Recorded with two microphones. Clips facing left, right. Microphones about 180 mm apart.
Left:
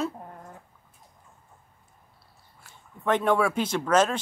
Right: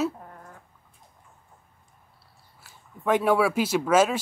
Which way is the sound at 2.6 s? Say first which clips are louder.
Right 1 dB; 5° right (ahead or behind).